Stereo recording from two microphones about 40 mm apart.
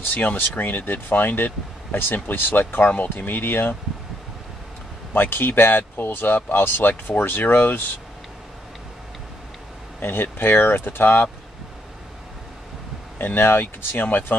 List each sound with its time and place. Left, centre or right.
0.1 s speech: left
5.1 s speech: left
10.0 s speech: left
13.2 s speech: left